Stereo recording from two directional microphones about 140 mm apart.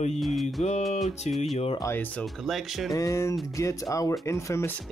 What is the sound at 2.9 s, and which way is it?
Speech, 25° left (ahead or behind).